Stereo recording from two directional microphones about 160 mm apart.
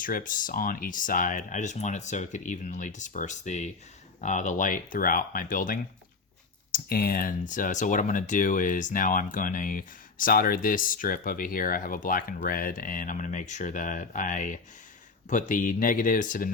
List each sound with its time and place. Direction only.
0.0 s speech: 55° left (ahead or behind)
6.7 s speech: 70° left (ahead or behind)